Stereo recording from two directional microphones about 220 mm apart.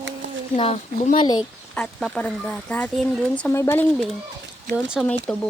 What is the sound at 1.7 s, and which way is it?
Speech, 5° left (ahead or behind).